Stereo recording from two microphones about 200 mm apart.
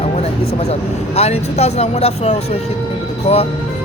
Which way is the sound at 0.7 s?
30° left (ahead or behind).